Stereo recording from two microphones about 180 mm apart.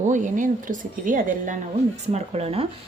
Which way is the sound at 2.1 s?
35° right (ahead or behind).